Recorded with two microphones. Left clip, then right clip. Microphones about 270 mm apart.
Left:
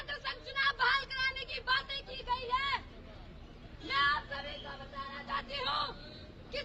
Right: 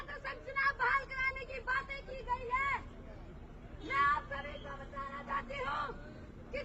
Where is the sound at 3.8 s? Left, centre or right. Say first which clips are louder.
Left 1 dB; centre.